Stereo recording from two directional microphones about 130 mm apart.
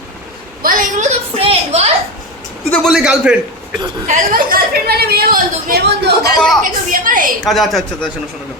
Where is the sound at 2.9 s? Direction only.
5° right (ahead or behind).